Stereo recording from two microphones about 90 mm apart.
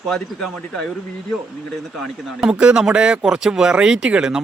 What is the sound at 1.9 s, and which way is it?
Speech, 5° right (ahead or behind).